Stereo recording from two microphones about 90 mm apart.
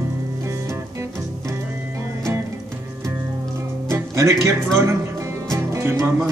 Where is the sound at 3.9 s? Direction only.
30° right (ahead or behind).